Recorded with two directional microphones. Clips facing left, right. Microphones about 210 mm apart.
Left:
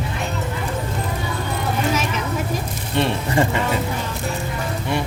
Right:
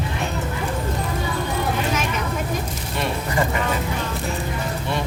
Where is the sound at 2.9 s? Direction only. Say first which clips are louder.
Left 5 dB; 30° left (ahead or behind).